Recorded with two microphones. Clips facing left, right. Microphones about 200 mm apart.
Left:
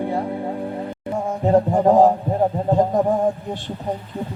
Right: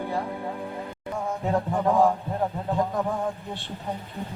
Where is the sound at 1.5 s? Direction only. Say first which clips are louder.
Left 9 dB; 35° left (ahead or behind).